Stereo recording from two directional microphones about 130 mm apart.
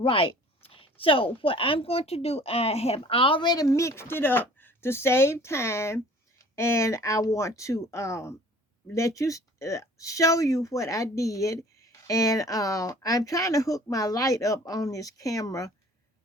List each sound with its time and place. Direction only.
0.0 s speech: 45° left (ahead or behind); by 15.7 s 25° left (ahead or behind)